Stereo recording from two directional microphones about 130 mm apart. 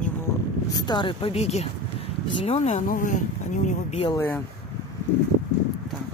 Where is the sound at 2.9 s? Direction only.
80° left.